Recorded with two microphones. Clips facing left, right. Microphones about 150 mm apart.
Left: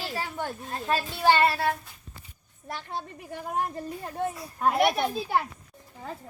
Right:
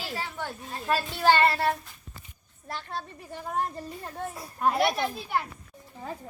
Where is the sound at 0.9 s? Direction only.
15° left (ahead or behind).